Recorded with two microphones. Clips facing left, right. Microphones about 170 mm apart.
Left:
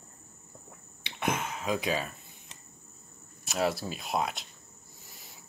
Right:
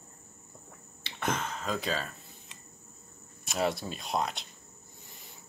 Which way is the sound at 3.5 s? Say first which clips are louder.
Left 1 dB; centre (ahead or behind).